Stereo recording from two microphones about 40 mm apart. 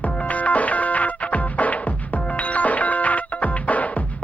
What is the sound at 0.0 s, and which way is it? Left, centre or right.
Music, left.